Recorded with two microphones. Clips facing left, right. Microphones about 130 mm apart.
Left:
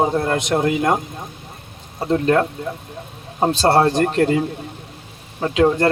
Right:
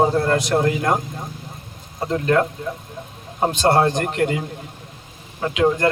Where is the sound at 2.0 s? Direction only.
30° left (ahead or behind).